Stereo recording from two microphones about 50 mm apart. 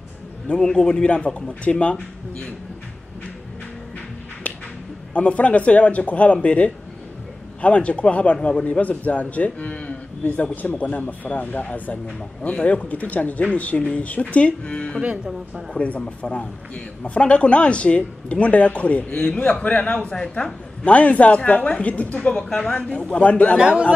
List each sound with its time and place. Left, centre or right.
0.5 s a man's voice: centre
5.1 s a man's voice: left
22.4 s a man's voice: centre
23.6 s speech: right